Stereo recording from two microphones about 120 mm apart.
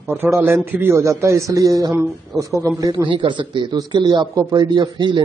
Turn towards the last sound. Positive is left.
turn(degrees=-40)  # may be behind; listen again after turning